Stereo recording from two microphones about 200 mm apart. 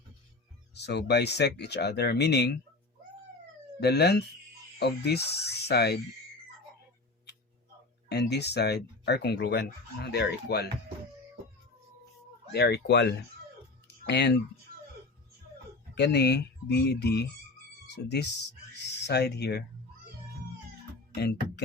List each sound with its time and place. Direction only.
0.7 s speech: 55° left (ahead or behind)
3.8 s speech: 55° left (ahead or behind)
8.1 s speech: 55° left (ahead or behind)
12.5 s speech: 55° left (ahead or behind)
13.8 s a sound: 60° left (ahead or behind)
16.0 s speech: 55° left (ahead or behind)
21.2 s speech: 55° left (ahead or behind)